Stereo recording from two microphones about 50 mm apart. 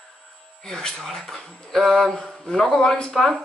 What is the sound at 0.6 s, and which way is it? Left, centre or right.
Speech, centre.